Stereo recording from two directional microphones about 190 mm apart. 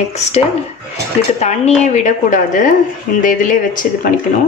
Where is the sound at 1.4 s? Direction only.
35° left (ahead or behind).